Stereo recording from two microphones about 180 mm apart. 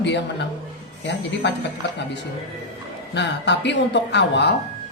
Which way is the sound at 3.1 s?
75° left (ahead or behind).